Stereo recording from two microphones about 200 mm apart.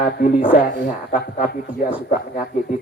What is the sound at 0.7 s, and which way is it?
Speech, 45° left (ahead or behind).